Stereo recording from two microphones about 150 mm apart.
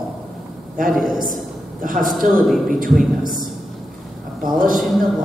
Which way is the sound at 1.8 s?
65° right (ahead or behind).